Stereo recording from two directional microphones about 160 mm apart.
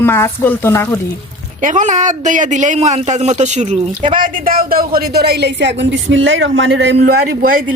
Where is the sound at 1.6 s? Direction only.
55° right (ahead or behind).